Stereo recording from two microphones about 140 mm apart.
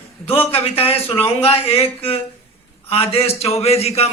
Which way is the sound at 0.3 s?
40° left (ahead or behind).